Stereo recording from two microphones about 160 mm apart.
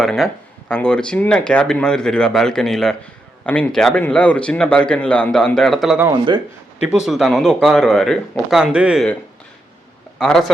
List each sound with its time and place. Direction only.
0.0 s speech: centre (ahead or behind)
6.1 s speech: 30° right (ahead or behind)
6.8 s speech: 5° right (ahead or behind)
10.2 s speech: 5° left (ahead or behind)